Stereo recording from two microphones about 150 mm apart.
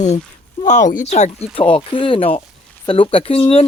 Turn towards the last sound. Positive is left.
turn(degrees=40)  # may be behind; listen again after turning